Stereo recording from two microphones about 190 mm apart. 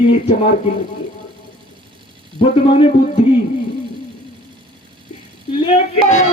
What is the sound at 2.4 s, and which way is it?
Speech, 30° left (ahead or behind).